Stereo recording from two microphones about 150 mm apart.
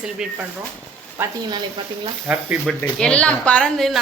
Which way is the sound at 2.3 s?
5° right (ahead or behind).